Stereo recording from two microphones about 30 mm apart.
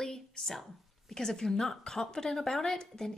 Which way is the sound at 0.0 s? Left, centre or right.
Centre.